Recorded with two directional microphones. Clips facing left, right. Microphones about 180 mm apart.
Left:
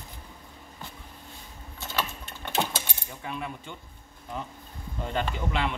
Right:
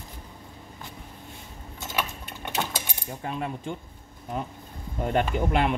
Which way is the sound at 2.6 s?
10° left (ahead or behind).